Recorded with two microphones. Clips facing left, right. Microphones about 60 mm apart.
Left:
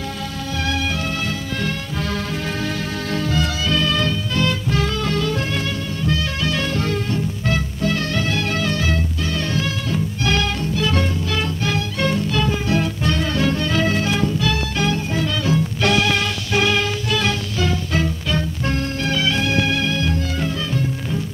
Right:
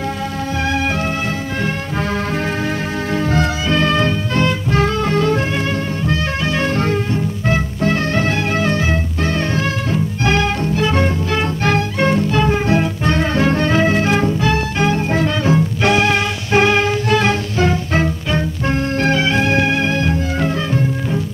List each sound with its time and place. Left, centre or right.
3.1 s music: right